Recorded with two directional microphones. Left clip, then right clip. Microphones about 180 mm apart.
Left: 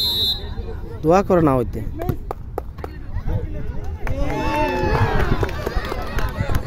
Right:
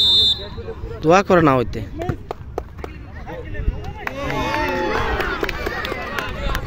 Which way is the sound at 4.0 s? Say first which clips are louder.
Right 2 dB; 75° left (ahead or behind).